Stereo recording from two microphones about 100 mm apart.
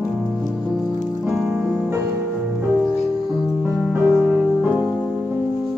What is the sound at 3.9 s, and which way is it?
Music, 15° right (ahead or behind).